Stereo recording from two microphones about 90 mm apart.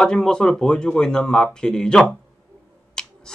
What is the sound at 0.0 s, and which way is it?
Speech, 10° left (ahead or behind).